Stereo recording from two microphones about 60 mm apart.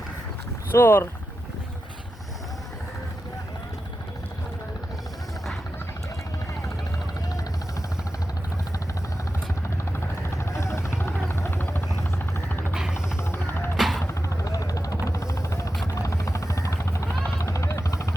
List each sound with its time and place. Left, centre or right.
0.7 s speech: left
10.2 s vehicle: left
10.9 s vehicle: left
12.7 s music: centre
13.2 s music: left
13.7 s music: centre
14.4 s vehicle: left
15.1 s music: left
16.0 s helicopter: left